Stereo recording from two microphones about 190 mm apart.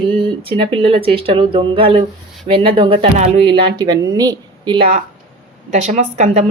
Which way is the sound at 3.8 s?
20° right (ahead or behind).